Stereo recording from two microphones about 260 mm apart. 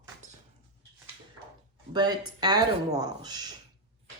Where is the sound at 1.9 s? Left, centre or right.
Centre.